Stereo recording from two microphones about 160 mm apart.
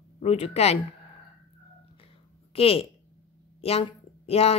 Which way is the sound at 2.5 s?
35° left (ahead or behind).